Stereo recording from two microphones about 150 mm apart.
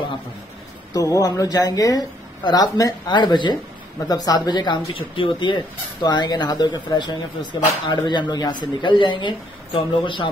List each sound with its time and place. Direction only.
0.9 s speech: 25° left (ahead or behind)